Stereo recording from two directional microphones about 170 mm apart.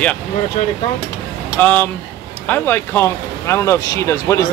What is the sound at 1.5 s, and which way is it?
Speech, 10° left (ahead or behind).